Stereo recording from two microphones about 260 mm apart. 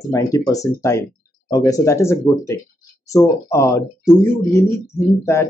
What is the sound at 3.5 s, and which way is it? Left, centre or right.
Speech, centre.